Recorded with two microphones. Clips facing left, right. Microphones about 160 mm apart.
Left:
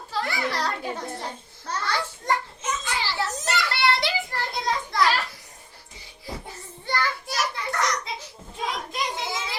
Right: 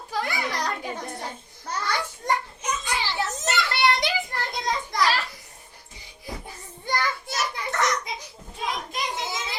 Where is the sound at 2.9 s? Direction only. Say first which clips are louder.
Even; 20° right (ahead or behind).